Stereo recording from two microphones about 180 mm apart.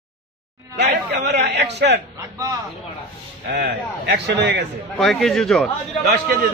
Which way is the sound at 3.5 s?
75° right (ahead or behind).